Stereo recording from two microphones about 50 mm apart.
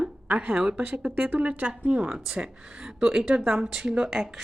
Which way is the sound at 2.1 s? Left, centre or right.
Centre.